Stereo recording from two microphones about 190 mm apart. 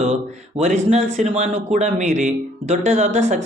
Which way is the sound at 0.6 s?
35° right (ahead or behind).